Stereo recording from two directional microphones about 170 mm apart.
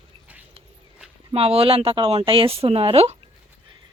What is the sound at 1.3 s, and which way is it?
Speech, 35° right (ahead or behind).